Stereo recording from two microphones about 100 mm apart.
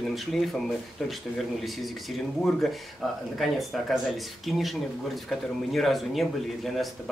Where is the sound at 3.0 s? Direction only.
5° left (ahead or behind).